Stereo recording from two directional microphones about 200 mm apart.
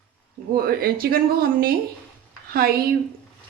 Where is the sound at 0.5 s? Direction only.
50° right (ahead or behind).